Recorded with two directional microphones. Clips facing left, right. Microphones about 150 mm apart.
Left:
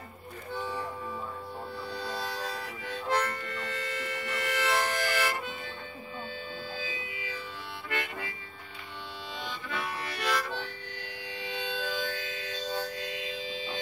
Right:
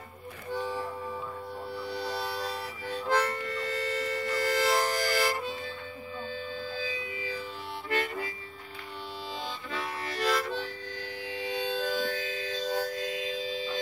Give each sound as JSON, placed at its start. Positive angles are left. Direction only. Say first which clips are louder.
{"t": 2.4, "sound": "harmonica", "louder": "right 2 dB", "side_deg": -30}
{"t": 7.2, "sound": "music", "louder": "right 4 dB", "side_deg": -35}
{"t": 7.9, "sound": "harmonica", "louder": "right 5 dB", "side_deg": -35}
{"t": 10.2, "sound": "harmonica", "louder": "right 3 dB", "side_deg": -35}
{"t": 11.3, "sound": "music", "louder": "right 4 dB", "side_deg": -40}